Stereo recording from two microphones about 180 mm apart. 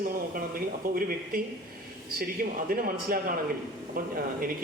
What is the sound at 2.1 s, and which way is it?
Speech, 55° right (ahead or behind).